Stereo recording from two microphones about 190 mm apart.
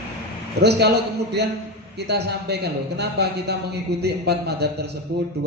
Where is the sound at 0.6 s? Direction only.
60° right (ahead or behind).